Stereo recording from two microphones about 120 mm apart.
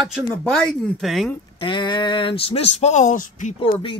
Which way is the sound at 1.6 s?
40° left (ahead or behind).